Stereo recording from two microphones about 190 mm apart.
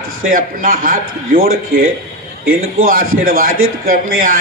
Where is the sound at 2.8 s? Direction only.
50° right (ahead or behind).